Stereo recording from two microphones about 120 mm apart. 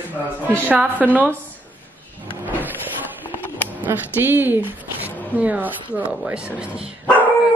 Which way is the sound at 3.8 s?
15° right (ahead or behind).